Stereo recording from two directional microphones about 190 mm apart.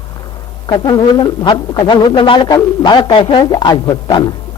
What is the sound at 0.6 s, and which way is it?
A man's voice, 25° left (ahead or behind).